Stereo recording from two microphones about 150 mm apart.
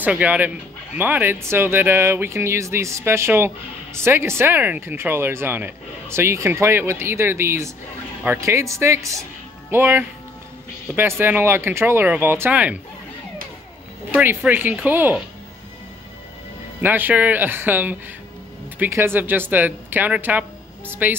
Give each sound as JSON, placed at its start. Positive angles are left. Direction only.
{"t": 0.0, "sound": "speech", "side_deg": -10}
{"t": 14.1, "sound": "speech", "side_deg": -15}
{"t": 16.8, "sound": "speech", "side_deg": -10}